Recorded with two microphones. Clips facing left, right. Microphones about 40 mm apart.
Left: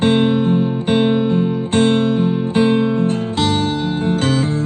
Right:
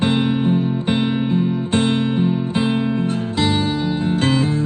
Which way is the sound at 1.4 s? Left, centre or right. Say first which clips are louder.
Left 3 dB; left.